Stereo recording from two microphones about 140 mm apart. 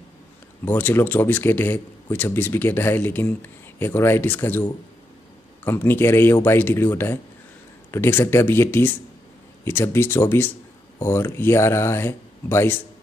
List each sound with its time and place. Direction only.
0.7 s speech: 15° left (ahead or behind)